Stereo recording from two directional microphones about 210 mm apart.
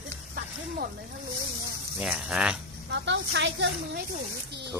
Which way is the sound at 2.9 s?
60° right (ahead or behind).